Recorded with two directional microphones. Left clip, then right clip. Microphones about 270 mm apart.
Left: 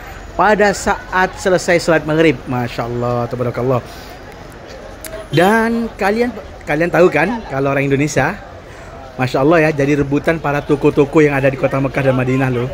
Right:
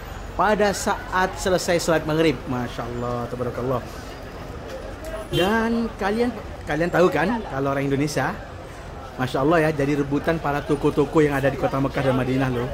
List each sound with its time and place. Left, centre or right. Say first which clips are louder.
0.4 s a woman's voice: left 8 dB; centre
5.3 s a woman's voice: left 9 dB; centre